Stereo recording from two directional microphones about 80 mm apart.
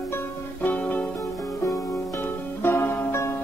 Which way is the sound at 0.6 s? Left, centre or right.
Centre.